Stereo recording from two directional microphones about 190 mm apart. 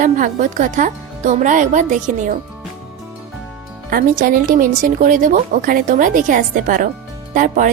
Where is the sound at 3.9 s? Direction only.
45° right (ahead or behind).